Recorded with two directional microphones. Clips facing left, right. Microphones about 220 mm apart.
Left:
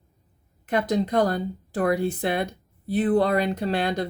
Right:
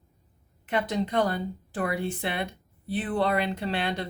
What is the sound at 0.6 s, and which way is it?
Speech, 40° left (ahead or behind).